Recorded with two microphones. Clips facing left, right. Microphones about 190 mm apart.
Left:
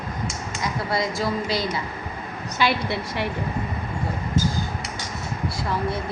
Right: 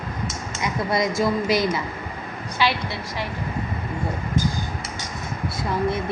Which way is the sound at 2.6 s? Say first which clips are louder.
Left 1 dB; 60° left (ahead or behind).